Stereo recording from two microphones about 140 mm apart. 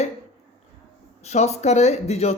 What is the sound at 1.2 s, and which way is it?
Speech, 50° left (ahead or behind).